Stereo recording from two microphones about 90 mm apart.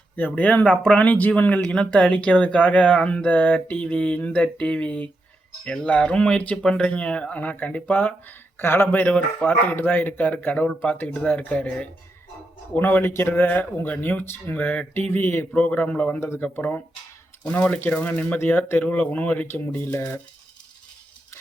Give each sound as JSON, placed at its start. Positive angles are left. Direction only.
{"t": 0.2, "sound": "speech", "side_deg": 15}